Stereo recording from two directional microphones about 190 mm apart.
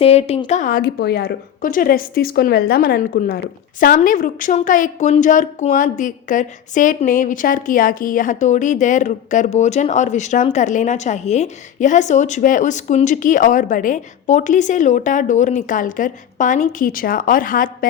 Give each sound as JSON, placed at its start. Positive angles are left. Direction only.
{"t": 0.0, "sound": "a woman's voice", "side_deg": 30}
{"t": 1.6, "sound": "a woman's voice", "side_deg": 45}